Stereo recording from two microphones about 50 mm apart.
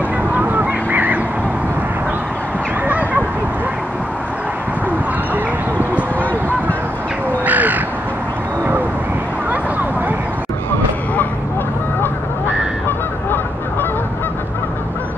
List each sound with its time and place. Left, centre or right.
0.3 s honk: right
2.9 s honk: right
7.4 s crow: right
9.5 s a sound: right
12.8 s honk: left